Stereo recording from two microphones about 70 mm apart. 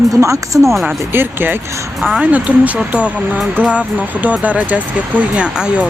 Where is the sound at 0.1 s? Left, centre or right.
Right.